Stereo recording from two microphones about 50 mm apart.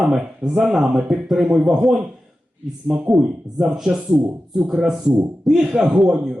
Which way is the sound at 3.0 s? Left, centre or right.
Centre.